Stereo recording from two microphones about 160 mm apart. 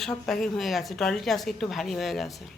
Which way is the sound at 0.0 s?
Centre (ahead or behind).